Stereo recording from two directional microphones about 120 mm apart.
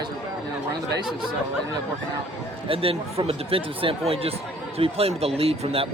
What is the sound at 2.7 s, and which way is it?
Speech, 50° right (ahead or behind).